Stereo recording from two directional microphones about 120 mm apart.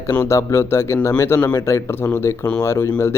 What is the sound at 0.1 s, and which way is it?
Speech, 20° left (ahead or behind).